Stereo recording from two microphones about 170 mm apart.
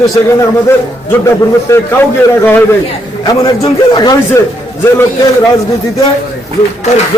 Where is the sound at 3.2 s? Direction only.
20° left (ahead or behind).